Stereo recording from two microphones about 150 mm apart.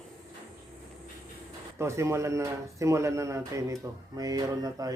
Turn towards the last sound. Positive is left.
turn(degrees=-25)  # may be behind; listen again after turning